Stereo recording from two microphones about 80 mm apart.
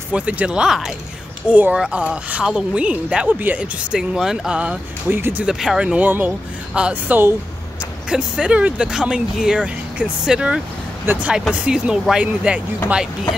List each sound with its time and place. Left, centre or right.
0.1 s speech: centre
1.5 s speech: centre
3.9 s speech: centre
5.1 s speech: right
5.4 s speech: centre; by 7.3 s right
8.1 s speech: centre
11.1 s speech: right
11.5 s speech: centre